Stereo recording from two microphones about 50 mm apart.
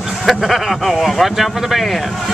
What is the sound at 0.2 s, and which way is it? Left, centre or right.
Speech, centre.